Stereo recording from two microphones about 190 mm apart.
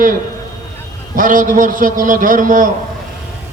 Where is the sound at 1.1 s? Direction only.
45° right (ahead or behind).